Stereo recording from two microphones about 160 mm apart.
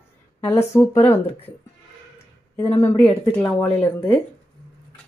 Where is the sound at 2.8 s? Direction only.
15° left (ahead or behind).